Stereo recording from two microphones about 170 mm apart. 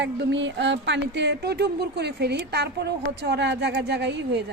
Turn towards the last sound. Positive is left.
turn(degrees=-90)